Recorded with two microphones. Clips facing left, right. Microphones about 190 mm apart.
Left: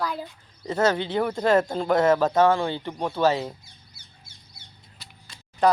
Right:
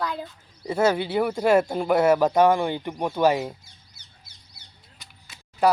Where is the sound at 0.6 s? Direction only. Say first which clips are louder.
Right 1 dB; 10° right (ahead or behind).